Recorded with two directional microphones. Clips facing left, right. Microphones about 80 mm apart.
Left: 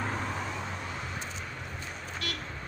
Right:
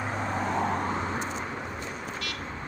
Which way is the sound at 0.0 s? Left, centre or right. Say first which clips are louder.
Right 2 dB; right.